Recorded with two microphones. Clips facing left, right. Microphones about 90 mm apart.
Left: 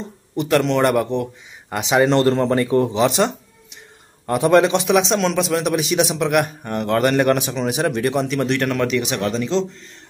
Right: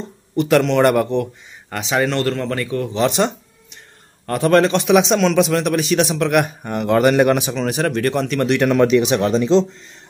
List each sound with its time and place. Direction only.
0.5 s a man's voice: centre (ahead or behind)
1.7 s speech: 15° left (ahead or behind)
3.0 s music: centre (ahead or behind)
4.3 s speech: 15° left (ahead or behind)
4.8 s a man's voice: centre (ahead or behind)
6.4 s a man's voice: 5° right (ahead or behind)
7.5 s speech: 10° left (ahead or behind)
8.5 s speech: 15° right (ahead or behind)